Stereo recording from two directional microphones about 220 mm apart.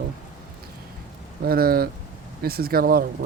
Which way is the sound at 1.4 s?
45° right (ahead or behind).